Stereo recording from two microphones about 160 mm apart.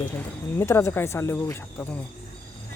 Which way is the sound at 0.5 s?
15° left (ahead or behind).